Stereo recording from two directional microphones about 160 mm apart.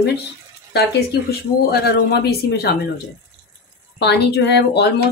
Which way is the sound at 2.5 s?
80° left.